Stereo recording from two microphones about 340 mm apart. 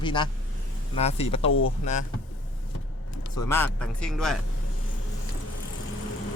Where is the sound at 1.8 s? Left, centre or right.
Left.